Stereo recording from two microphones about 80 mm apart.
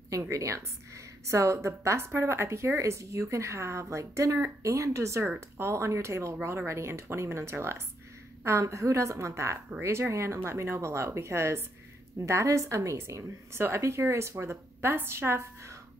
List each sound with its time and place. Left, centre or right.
0.1 s a woman's voice: right